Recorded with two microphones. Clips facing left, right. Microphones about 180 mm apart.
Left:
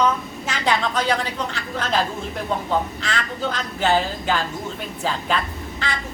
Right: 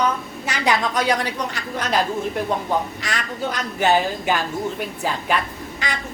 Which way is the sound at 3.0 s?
15° right (ahead or behind).